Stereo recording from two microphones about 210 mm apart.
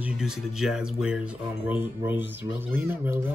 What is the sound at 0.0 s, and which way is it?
Speech, 5° right (ahead or behind).